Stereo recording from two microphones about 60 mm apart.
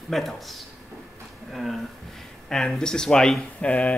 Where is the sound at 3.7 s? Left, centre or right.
Left.